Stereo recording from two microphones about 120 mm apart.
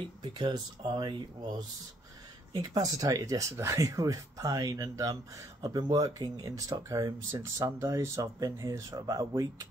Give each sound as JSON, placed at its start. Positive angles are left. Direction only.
{"t": 0.2, "sound": "speech", "side_deg": -40}